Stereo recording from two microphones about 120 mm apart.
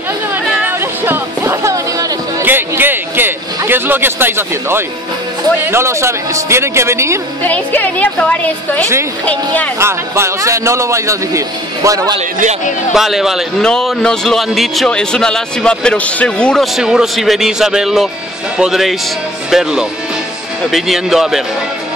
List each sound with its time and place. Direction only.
0.5 s music: 15° right (ahead or behind)
2.4 s a sound: 15° right (ahead or behind)
5.7 s a man's voice: 20° right (ahead or behind)
7.4 s a woman's voice: 15° left (ahead or behind)
9.8 s a man's voice: 20° right (ahead or behind)
12.9 s a man's voice: centre (ahead or behind)
16.7 s a man's voice: 5° right (ahead or behind)